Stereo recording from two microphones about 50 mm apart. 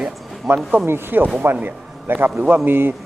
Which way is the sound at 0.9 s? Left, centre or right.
Right.